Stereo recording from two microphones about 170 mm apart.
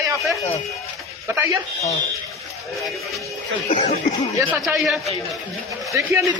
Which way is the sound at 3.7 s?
45° left (ahead or behind).